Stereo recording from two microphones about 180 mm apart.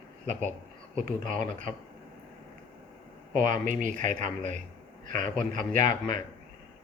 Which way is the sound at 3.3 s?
45° right (ahead or behind).